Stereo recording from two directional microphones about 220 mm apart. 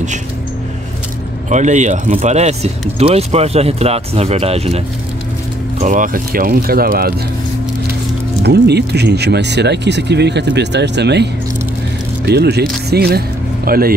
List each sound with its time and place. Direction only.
1.5 s speech: 35° right (ahead or behind)
8.4 s speech: 50° right (ahead or behind)
12.3 s speech: 50° right (ahead or behind)